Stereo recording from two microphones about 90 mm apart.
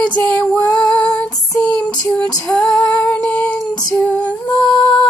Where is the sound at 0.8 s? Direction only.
10° left (ahead or behind).